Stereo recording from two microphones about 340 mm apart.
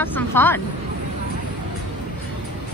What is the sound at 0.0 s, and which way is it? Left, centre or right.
Speech, centre.